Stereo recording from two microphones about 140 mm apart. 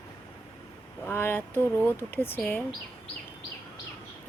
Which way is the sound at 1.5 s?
15° right (ahead or behind).